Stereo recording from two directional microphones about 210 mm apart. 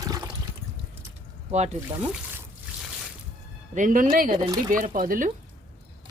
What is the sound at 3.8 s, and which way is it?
Speech, 40° right (ahead or behind).